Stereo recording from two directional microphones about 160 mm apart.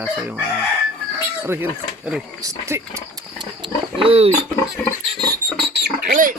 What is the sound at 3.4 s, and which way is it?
Roaring cats, 30° right (ahead or behind).